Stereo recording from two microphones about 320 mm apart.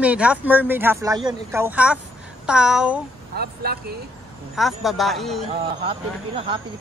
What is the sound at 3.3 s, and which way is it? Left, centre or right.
Speech, right.